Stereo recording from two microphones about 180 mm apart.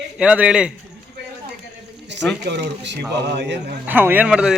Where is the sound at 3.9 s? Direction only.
10° right (ahead or behind).